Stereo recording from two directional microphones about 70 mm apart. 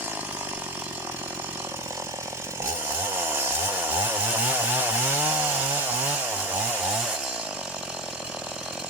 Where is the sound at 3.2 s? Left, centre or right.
Right.